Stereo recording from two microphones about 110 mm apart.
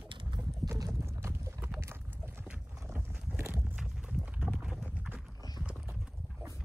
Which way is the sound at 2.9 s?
20° right (ahead or behind).